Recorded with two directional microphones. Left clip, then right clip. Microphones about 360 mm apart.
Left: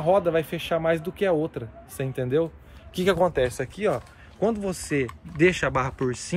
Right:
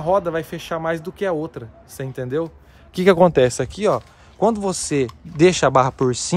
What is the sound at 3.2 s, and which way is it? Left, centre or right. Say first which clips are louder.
Speech: right 8 dB; right.